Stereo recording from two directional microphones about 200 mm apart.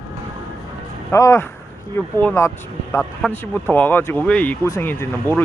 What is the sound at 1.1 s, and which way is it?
Speech, 15° left (ahead or behind).